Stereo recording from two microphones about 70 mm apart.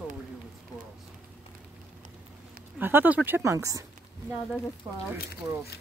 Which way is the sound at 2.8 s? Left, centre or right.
Right.